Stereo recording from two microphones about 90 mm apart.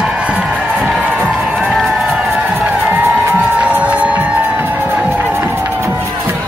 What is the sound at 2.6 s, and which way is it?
Music, 20° right (ahead or behind).